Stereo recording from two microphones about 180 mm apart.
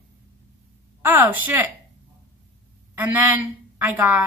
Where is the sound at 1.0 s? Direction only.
10° right (ahead or behind).